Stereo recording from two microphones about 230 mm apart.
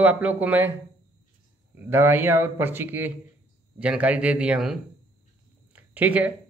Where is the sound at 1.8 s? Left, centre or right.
Centre.